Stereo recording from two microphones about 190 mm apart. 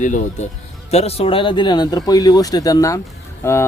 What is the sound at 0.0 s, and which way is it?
Speech, 40° left (ahead or behind).